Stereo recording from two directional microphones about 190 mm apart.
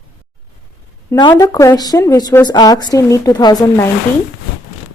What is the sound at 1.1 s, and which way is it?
A woman's voice, 25° left (ahead or behind).